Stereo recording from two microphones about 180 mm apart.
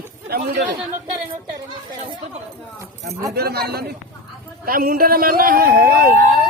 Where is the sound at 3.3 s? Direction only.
60° right (ahead or behind).